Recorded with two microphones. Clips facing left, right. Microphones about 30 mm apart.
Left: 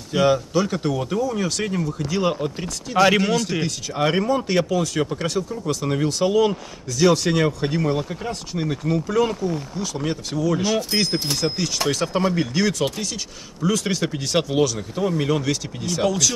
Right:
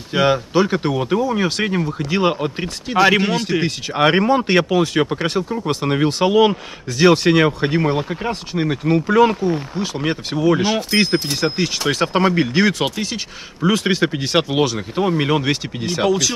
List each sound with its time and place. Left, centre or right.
0.1 s speech: right
3.9 s speech: right
16.1 s speech: centre